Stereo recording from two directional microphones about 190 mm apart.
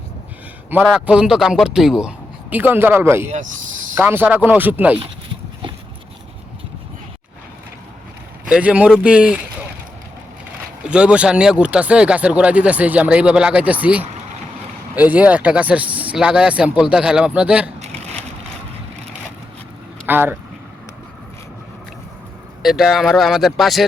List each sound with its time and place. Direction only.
0.7 s a man's voice: 5° right (ahead or behind)
4.9 s dog: 25° right (ahead or behind)
8.4 s a man's voice: 5° right (ahead or behind)
10.8 s speech: 5° right (ahead or behind)
17.7 s a sound: 35° right (ahead or behind)
20.1 s speech: 10° right (ahead or behind)
22.6 s a man's voice: centre (ahead or behind)